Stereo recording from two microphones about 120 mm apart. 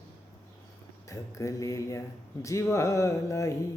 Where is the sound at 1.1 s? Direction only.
25° left (ahead or behind).